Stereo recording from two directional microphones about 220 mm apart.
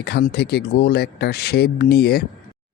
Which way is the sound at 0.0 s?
50° left (ahead or behind).